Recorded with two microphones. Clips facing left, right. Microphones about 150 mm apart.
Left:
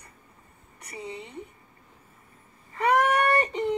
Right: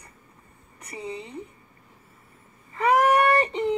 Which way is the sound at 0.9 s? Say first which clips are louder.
Right 3 dB; 35° right (ahead or behind).